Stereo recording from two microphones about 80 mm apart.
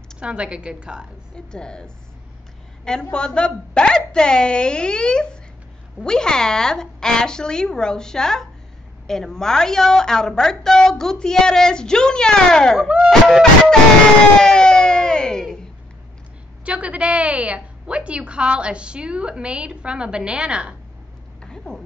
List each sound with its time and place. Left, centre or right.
0.2 s a woman's voice: centre
1.3 s a woman's voice: centre
12.8 s a woman's voice: centre
13.3 s a woman's voice: centre
14.4 s a sound: centre
16.6 s a woman's voice: centre
21.4 s a sound: centre